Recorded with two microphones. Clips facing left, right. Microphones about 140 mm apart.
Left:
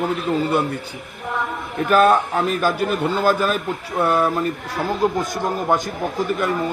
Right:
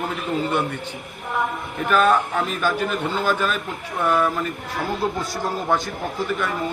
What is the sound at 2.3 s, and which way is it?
A man's voice, 35° left (ahead or behind).